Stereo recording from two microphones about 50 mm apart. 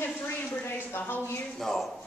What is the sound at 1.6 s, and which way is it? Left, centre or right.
Speech, centre.